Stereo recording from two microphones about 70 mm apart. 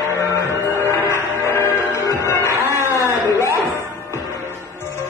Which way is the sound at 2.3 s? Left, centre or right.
Left.